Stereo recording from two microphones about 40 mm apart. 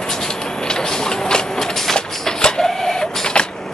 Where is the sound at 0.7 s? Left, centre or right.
Centre.